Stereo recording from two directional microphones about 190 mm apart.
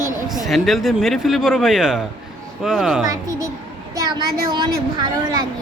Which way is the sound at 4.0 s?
20° right (ahead or behind).